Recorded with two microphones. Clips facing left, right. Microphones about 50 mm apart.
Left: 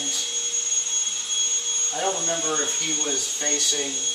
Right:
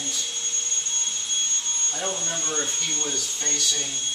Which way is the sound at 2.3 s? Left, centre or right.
Centre.